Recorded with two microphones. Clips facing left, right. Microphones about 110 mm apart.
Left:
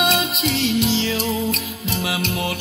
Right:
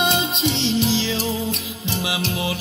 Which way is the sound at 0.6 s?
25° right (ahead or behind).